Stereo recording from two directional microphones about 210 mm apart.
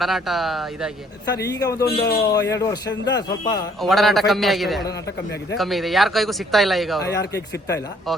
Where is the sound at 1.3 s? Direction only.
15° left (ahead or behind).